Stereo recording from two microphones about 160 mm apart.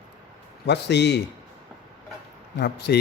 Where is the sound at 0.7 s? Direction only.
90° left.